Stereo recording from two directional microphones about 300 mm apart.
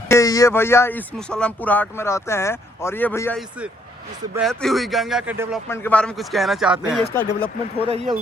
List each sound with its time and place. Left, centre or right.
0.1 s a man's voice: centre
5.6 s a man's voice: centre
7.8 s speech: centre